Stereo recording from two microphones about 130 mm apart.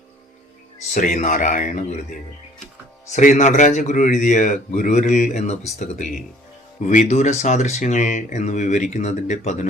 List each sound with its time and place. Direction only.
0.9 s a man's voice: 75° left (ahead or behind)
3.1 s a man's voice: 70° left (ahead or behind)